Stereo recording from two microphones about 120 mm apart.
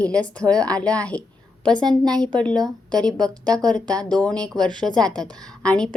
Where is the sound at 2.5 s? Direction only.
35° right (ahead or behind).